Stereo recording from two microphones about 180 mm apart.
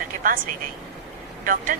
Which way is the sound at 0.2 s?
50° right (ahead or behind).